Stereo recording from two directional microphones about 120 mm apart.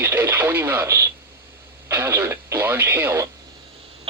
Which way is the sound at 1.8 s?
20° right (ahead or behind).